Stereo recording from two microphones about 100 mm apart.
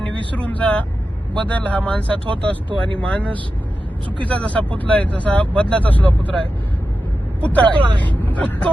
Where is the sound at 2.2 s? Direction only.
55° right (ahead or behind).